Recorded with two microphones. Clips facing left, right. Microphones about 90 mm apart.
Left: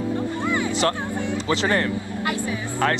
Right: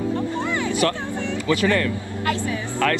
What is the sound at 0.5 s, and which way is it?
Vehicle, 25° left (ahead or behind).